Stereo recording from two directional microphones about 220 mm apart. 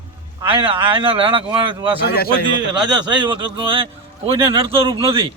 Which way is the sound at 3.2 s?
25° right (ahead or behind).